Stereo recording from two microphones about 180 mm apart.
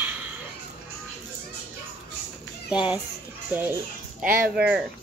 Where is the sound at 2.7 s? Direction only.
5° right (ahead or behind).